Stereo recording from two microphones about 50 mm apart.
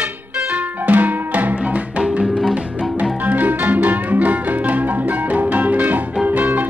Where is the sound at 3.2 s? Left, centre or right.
Right.